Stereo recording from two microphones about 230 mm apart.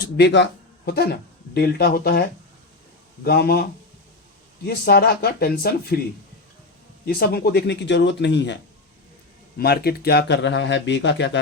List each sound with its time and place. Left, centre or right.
0.2 s speech: left
3.2 s speech: left
7.0 s speech: left
9.6 s speech: left